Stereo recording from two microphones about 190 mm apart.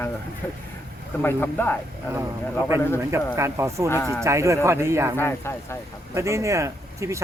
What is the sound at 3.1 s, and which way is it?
Speech, 15° right (ahead or behind).